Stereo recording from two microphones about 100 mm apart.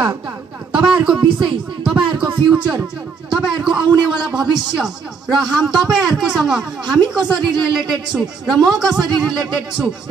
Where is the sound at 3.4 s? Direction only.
5° right (ahead or behind).